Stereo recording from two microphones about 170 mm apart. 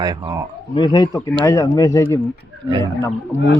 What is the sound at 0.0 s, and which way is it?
Speech, 25° right (ahead or behind).